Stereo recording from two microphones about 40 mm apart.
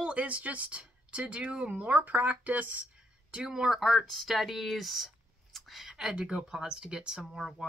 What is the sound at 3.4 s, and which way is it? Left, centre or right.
Speech, centre.